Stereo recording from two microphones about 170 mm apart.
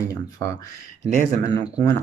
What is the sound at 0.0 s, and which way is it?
Speech, 20° left (ahead or behind).